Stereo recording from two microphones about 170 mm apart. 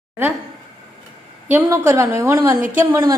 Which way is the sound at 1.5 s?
15° right (ahead or behind).